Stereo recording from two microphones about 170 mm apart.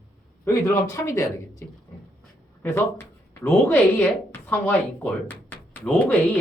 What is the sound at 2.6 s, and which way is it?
Speech, 15° left (ahead or behind).